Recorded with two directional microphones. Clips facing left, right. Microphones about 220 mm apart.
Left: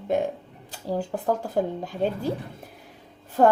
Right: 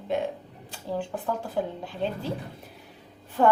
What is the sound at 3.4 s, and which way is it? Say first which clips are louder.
Speech: left 2 dB; 40° left (ahead or behind).